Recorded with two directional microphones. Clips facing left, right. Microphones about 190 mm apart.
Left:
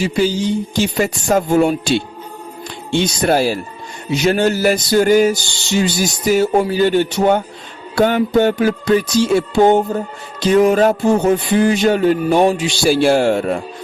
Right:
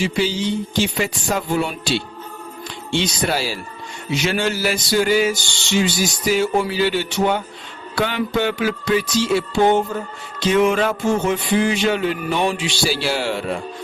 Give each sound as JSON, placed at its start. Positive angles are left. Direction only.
{"t": 0.0, "sound": "music", "side_deg": 45}
{"t": 3.2, "sound": "music", "side_deg": 45}
{"t": 5.7, "sound": "speech", "side_deg": 40}
{"t": 6.7, "sound": "music", "side_deg": 45}